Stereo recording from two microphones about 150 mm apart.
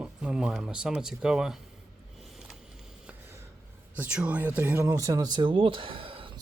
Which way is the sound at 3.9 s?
10° right (ahead or behind).